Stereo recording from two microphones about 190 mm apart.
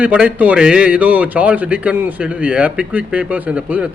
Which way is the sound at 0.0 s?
5° right (ahead or behind).